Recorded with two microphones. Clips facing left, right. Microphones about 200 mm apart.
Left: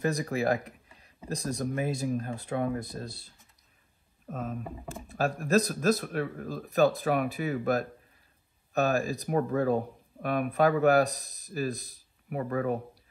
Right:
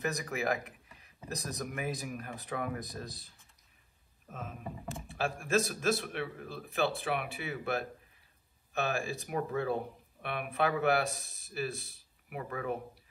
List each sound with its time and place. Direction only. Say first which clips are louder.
0.0 s speech: left 6 dB; 30° left (ahead or behind)
4.3 s speech: left 7 dB; 40° left (ahead or behind)